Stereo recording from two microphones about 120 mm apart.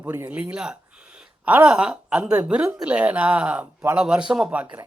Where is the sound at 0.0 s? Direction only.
15° right (ahead or behind).